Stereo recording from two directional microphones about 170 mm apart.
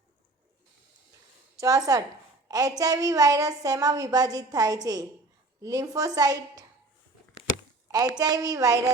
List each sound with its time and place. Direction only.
1.5 s a woman's voice: 20° right (ahead or behind)
7.9 s a sound: 20° right (ahead or behind)
8.2 s a woman's voice: 20° right (ahead or behind)